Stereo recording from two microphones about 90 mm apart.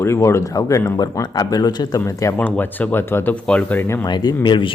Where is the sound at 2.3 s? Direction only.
20° left (ahead or behind).